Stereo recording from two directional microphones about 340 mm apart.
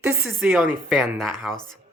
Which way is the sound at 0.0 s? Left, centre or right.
Centre.